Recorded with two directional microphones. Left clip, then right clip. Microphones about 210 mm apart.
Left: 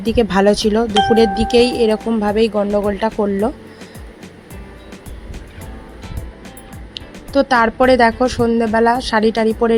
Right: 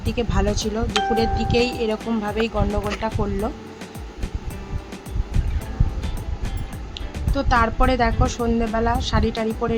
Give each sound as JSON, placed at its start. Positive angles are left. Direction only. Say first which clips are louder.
{"t": 0.0, "sound": "a woman's voice", "louder": "left 11 dB", "side_deg": 30}
{"t": 0.9, "sound": "speech", "louder": "left 4 dB", "side_deg": 0}
{"t": 1.4, "sound": "a woman's voice", "louder": "left 8 dB", "side_deg": 30}
{"t": 7.3, "sound": "a woman's voice", "louder": "left 7 dB", "side_deg": 25}